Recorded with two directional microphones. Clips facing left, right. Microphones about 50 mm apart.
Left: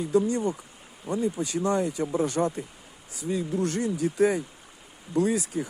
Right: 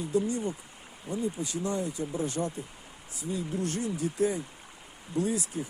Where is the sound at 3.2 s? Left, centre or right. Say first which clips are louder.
Left 5 dB; left.